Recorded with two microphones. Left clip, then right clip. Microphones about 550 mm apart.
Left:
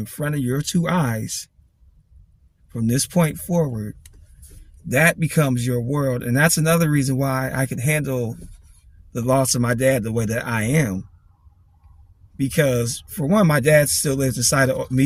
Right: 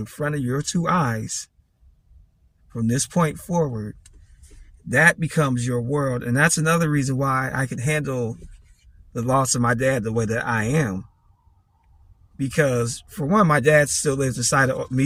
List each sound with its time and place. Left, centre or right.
0.0 s speech: left
2.6 s speech: left
4.9 s speech: left
12.5 s speech: left